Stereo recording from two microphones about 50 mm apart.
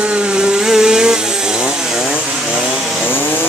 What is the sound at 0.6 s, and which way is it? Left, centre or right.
Vehicle, centre.